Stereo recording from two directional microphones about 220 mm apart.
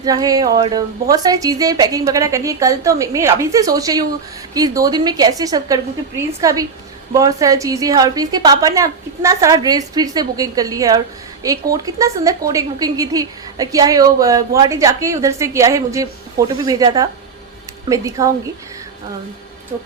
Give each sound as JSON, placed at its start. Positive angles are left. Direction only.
{"t": 0.0, "sound": "a woman's voice", "side_deg": -15}